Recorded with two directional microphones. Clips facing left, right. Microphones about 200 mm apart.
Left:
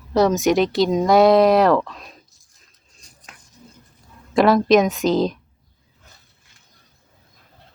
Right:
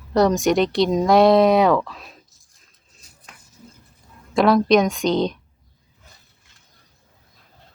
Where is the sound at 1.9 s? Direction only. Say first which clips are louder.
Even; centre (ahead or behind).